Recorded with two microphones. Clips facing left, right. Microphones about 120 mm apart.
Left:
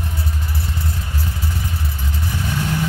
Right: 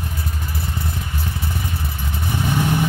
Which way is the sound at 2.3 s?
15° right (ahead or behind).